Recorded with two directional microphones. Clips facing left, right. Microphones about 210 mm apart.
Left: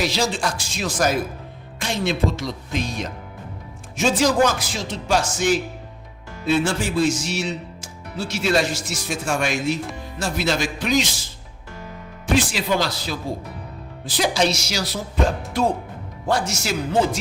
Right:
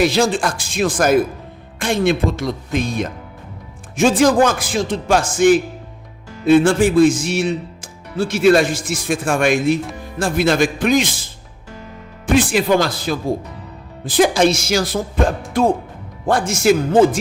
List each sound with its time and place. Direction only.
0.0 s a man's voice: 55° right (ahead or behind)